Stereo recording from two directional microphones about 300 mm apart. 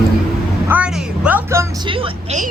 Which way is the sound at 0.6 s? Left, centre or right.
Centre.